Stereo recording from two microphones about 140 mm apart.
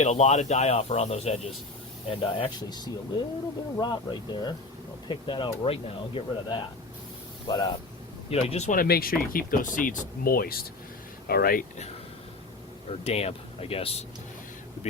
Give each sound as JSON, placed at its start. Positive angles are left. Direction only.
{"t": 0.0, "sound": "speech", "side_deg": 55}
{"t": 2.0, "sound": "speech", "side_deg": 35}
{"t": 7.4, "sound": "speech", "side_deg": 25}
{"t": 8.3, "sound": "speech", "side_deg": 45}
{"t": 8.7, "sound": "speech", "side_deg": 90}
{"t": 13.1, "sound": "speech", "side_deg": 45}